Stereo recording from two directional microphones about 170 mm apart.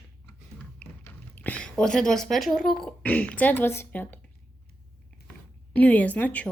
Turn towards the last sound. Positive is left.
turn(degrees=10)  # may be behind; listen again after turning